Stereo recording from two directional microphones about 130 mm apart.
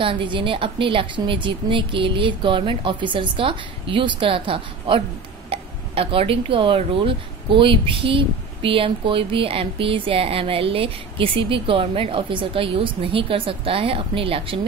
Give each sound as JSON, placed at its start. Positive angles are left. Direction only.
{"t": 0.0, "sound": "a woman's voice", "side_deg": -40}